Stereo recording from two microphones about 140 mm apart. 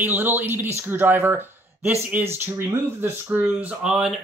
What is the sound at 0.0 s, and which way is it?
Speech, 15° right (ahead or behind).